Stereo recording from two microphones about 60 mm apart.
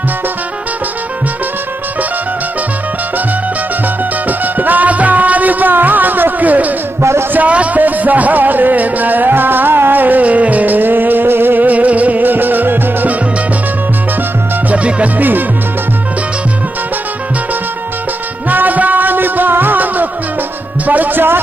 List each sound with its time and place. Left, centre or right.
4.3 s music: right
7.0 s a man's voice: right
7.3 s music: right
14.7 s music: right
18.5 s music: right